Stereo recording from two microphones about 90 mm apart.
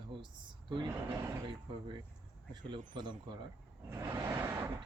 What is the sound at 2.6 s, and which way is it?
Speech, 55° right (ahead or behind).